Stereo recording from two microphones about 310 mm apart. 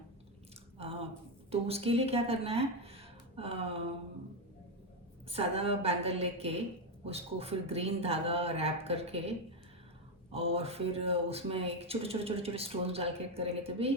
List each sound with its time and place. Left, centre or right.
0.8 s a sound: centre
1.5 s speech: centre
5.3 s speech: centre
10.3 s speech: centre